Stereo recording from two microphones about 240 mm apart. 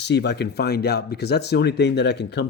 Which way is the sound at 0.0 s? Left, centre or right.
Left.